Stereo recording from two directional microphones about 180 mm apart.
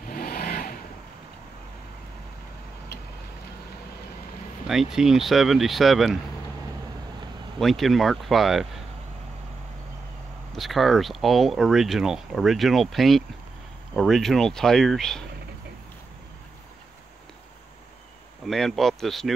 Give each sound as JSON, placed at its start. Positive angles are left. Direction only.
{"t": 0.1, "sound": "vehicle", "side_deg": 55}
{"t": 4.6, "sound": "speech", "side_deg": 0}
{"t": 7.5, "sound": "speech", "side_deg": 0}
{"t": 10.5, "sound": "speech", "side_deg": 0}
{"t": 18.4, "sound": "speech", "side_deg": 0}